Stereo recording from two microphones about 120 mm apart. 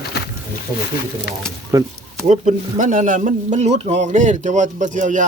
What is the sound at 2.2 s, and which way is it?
Speech, 85° right.